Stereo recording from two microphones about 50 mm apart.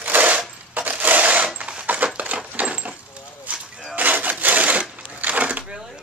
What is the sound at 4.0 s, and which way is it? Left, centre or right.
Wood, right.